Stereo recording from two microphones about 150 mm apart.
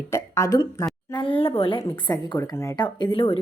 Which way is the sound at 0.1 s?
20° left (ahead or behind).